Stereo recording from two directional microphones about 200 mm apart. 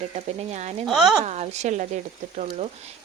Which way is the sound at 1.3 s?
35° right (ahead or behind).